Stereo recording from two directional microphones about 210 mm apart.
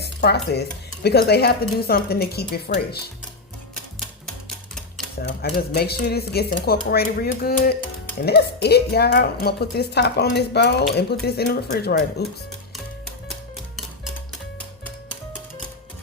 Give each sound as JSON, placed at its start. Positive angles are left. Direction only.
{"t": 0.0, "sound": "stir", "side_deg": 50}
{"t": 1.0, "sound": "a woman's voice", "side_deg": 50}
{"t": 4.4, "sound": "music", "side_deg": 0}
{"t": 5.2, "sound": "a woman's voice", "side_deg": 50}